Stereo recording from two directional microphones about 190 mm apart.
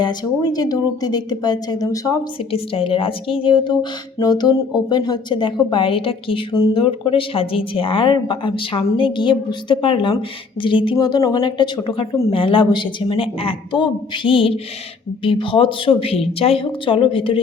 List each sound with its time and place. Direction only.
0.0 s a woman's voice: 20° left (ahead or behind)